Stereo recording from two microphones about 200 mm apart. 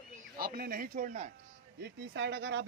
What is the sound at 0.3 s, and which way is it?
Speech, 50° right (ahead or behind).